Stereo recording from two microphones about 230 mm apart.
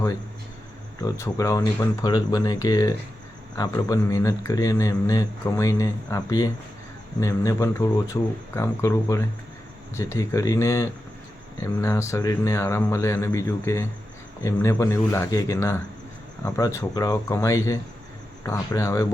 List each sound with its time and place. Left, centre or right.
1.0 s speech: centre